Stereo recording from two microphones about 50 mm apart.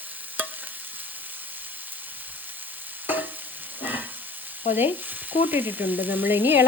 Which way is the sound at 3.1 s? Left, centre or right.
Right.